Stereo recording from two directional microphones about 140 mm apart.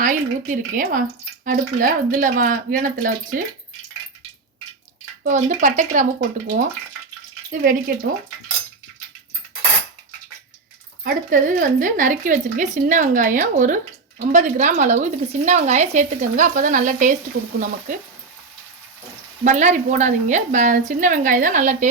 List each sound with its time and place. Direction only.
0.0 s speech: 70° right (ahead or behind)
5.2 s speech: 70° right (ahead or behind)
7.5 s speech: 90° right
11.0 s speech: 75° right (ahead or behind)
19.5 s speech: 60° right (ahead or behind)